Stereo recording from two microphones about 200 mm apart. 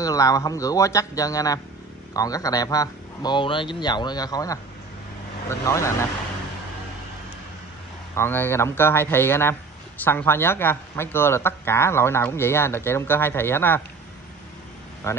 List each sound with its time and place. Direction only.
0.0 s a man's voice: 15° left (ahead or behind)
8.1 s a man's voice: 10° left (ahead or behind)
15.0 s a man's voice: 15° left (ahead or behind)